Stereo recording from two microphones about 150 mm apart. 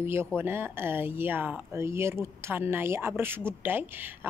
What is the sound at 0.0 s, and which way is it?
A woman's voice, 15° right (ahead or behind).